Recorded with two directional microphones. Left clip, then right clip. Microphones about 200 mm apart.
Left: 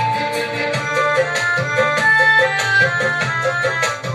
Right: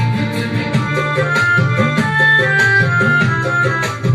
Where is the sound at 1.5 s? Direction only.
45° left (ahead or behind).